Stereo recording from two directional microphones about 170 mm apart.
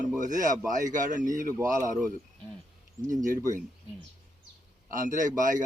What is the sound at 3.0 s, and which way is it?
Speech, 50° right (ahead or behind).